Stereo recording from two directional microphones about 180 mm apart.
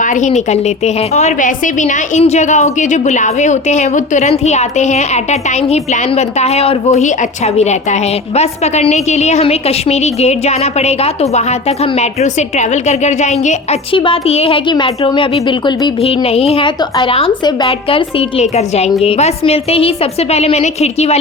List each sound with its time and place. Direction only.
0.0 s a woman's voice: 45° left (ahead or behind)
13.9 s a woman's voice: 30° left (ahead or behind)